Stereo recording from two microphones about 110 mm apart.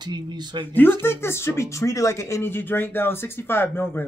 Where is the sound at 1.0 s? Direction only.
25° left (ahead or behind).